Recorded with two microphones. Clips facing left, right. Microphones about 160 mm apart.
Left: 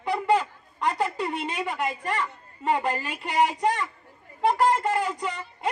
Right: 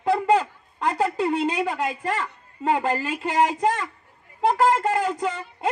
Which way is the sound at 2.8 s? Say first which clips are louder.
Right 4 dB; 35° right (ahead or behind).